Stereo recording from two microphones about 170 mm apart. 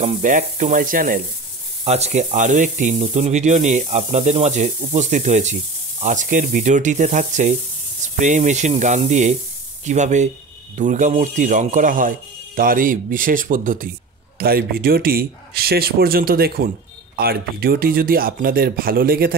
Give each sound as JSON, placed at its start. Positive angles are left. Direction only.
{"t": 0.2, "sound": "speech", "side_deg": -50}
{"t": 1.9, "sound": "speech", "side_deg": -40}